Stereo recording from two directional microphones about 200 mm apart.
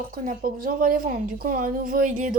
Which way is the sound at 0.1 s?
45° right (ahead or behind).